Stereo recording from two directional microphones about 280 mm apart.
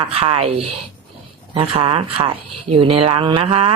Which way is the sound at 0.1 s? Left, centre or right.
Right.